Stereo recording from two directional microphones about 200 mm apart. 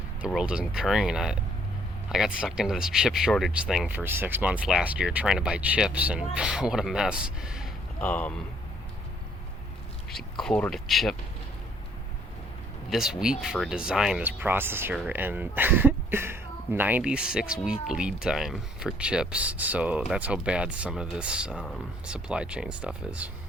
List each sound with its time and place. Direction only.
0.3 s speech: 5° right (ahead or behind)
10.4 s speech: 5° left (ahead or behind)
12.9 s speech: centre (ahead or behind)